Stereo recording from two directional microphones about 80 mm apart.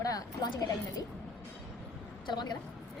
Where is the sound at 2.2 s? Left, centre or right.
Left.